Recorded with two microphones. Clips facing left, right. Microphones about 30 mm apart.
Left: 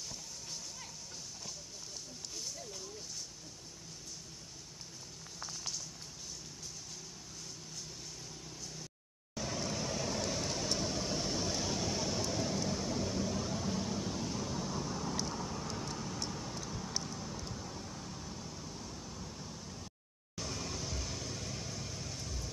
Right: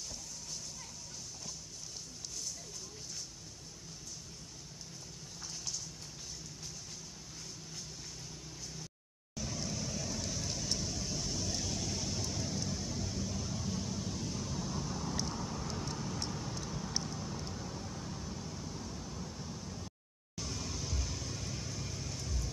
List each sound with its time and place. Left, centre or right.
9.3 s vehicle: left; by 19.9 s centre
20.3 s vehicle: centre